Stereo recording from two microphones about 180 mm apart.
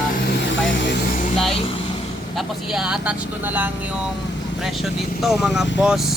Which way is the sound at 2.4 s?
Centre (ahead or behind).